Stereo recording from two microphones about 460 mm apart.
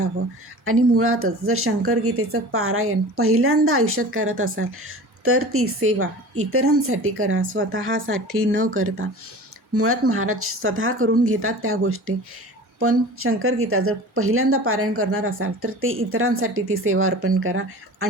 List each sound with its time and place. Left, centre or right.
0.6 s speech: right